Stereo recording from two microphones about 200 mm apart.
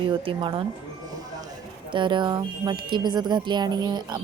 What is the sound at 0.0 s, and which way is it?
Speech, 25° right (ahead or behind).